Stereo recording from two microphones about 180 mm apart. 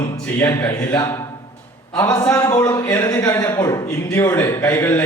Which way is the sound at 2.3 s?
20° left (ahead or behind).